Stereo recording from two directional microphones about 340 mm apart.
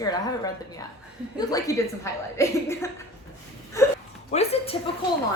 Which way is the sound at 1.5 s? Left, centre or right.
Centre.